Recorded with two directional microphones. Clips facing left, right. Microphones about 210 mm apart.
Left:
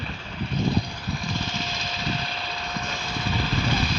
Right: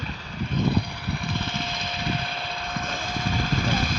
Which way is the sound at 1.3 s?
55° right (ahead or behind).